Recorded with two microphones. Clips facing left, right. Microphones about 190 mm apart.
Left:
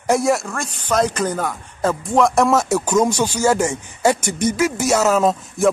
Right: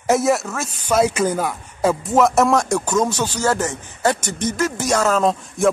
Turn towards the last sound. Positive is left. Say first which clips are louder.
# left 1 dB
turn(degrees=5)  # may be behind; listen again after turning